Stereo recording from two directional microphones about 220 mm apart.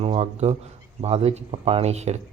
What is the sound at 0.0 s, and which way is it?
Speech, 30° right (ahead or behind).